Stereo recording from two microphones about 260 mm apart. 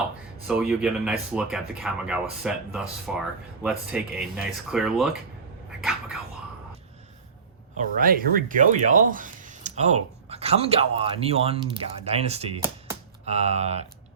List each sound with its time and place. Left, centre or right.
0.4 s speech: centre
5.8 s a sound: centre
7.8 s speech: right